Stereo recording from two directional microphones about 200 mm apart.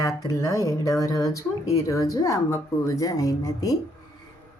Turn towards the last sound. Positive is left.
turn(degrees=15)  # may be behind; listen again after turning